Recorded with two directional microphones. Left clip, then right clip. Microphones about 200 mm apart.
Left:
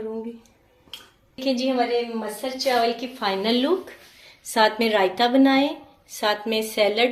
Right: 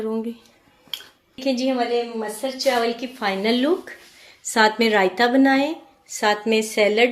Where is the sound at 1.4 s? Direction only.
40° right (ahead or behind).